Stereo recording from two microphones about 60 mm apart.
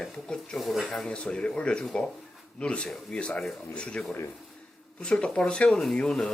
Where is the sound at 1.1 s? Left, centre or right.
Centre.